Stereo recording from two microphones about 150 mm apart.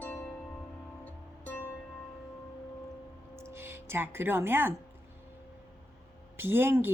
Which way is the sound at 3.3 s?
15° right (ahead or behind).